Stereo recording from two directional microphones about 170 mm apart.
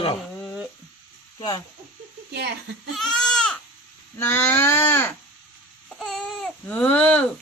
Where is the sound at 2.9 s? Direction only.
5° left (ahead or behind).